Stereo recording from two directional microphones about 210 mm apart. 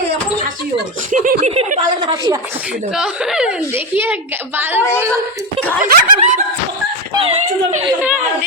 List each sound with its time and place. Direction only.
1.1 s speech: 40° right (ahead or behind); by 2.4 s 20° right (ahead or behind)
2.9 s a woman's voice: 5° right (ahead or behind)
5.8 s snicker: 35° right (ahead or behind)
7.2 s speech: 25° right (ahead or behind)
8.0 s a woman's voice: 5° right (ahead or behind)